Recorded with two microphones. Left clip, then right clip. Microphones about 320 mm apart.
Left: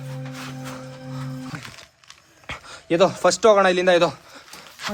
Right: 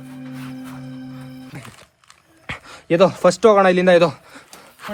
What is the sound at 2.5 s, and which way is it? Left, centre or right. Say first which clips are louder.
Speech: right 3 dB; right.